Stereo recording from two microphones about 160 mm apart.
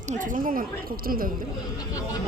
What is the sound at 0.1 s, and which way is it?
Speech, 55° right (ahead or behind).